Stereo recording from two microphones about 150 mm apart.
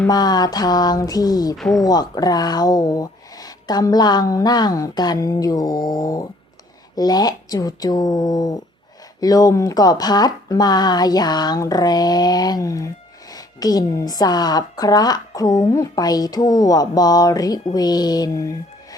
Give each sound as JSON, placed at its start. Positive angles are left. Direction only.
{"t": 0.1, "sound": "speech", "side_deg": 25}
{"t": 1.5, "sound": "speech", "side_deg": 0}
{"t": 1.8, "sound": "speech", "side_deg": 25}